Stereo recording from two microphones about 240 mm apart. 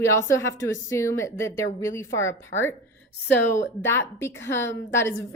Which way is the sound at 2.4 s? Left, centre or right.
Left.